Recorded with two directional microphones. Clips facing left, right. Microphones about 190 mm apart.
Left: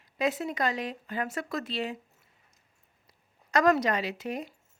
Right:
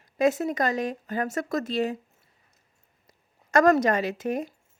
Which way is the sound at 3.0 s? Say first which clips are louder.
Right 4 dB; 45° right (ahead or behind).